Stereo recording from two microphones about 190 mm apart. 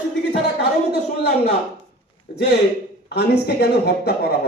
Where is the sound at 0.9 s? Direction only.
55° left (ahead or behind).